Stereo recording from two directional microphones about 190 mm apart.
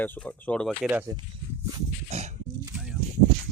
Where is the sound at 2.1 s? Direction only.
35° right (ahead or behind).